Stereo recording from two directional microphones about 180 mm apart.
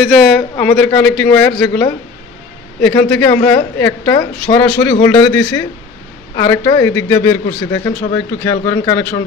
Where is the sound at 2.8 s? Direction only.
15° left (ahead or behind).